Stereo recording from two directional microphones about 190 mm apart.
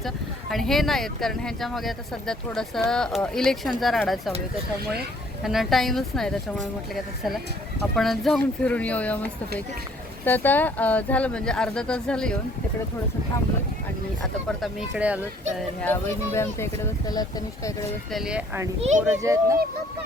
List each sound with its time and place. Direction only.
0.5 s speech: centre (ahead or behind)
5.4 s speech: centre (ahead or behind)
7.9 s speech: centre (ahead or behind)
14.6 s speech: 5° right (ahead or behind)
15.8 s speech: 10° left (ahead or behind)
18.1 s speech: 5° right (ahead or behind)